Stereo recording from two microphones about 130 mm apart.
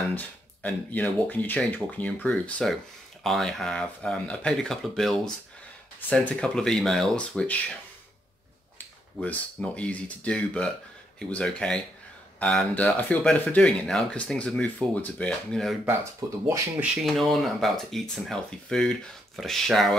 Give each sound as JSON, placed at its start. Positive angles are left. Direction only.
{"t": 0.1, "sound": "speech", "side_deg": 10}
{"t": 8.7, "sound": "speech", "side_deg": 10}
{"t": 15.8, "sound": "speech", "side_deg": -20}
{"t": 16.8, "sound": "speech", "side_deg": 0}